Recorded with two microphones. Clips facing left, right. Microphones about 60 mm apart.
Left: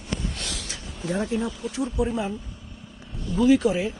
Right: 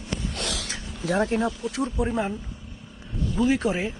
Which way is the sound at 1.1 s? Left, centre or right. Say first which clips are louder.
Right 3 dB; right.